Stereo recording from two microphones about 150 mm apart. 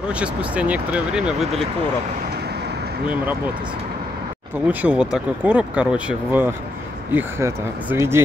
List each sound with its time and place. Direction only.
0.1 s speech: 10° right (ahead or behind)
4.6 s speech: 10° right (ahead or behind)